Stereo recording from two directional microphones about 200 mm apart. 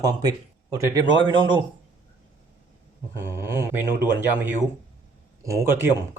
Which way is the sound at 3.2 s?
10° right (ahead or behind).